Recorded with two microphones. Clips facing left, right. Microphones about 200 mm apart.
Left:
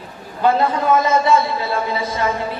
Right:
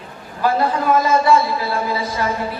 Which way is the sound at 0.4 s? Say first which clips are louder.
Left 1 dB; 25° left (ahead or behind).